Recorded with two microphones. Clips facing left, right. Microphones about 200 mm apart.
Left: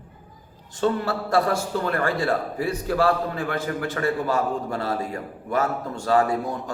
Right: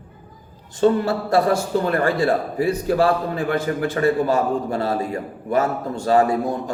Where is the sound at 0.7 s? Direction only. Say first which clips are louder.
Right 6 dB; 20° right (ahead or behind).